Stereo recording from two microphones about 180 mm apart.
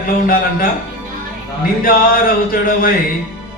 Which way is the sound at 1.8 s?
50° left (ahead or behind).